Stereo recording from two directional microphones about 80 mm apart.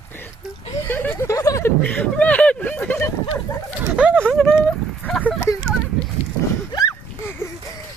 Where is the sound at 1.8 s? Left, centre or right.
Centre.